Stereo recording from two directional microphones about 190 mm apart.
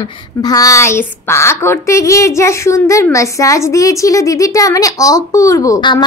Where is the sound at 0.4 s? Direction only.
20° left (ahead or behind).